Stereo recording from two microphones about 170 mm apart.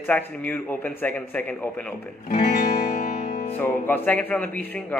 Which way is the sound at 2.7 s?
60° left (ahead or behind).